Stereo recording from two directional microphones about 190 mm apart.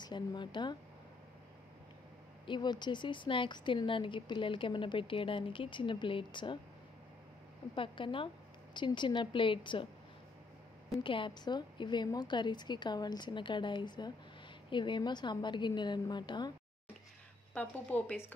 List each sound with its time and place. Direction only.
0.0 s speech: 25° left (ahead or behind)
2.4 s speech: 25° left (ahead or behind)
7.7 s speech: 25° left (ahead or behind)
11.0 s speech: 25° left (ahead or behind)
17.6 s a woman's voice: 10° left (ahead or behind)